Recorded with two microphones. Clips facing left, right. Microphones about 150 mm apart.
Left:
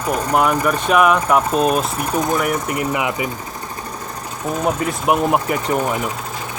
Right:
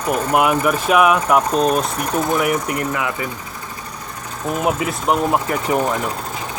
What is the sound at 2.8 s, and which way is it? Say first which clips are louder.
Speech: left 2 dB; 15° left (ahead or behind).